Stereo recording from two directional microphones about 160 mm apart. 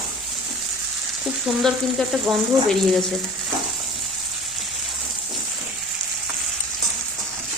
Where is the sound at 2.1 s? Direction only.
Centre (ahead or behind).